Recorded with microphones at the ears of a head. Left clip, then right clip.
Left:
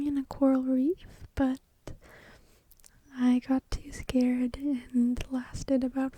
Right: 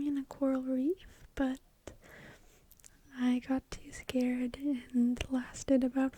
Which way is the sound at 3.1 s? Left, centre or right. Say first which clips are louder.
Left 6 dB; left.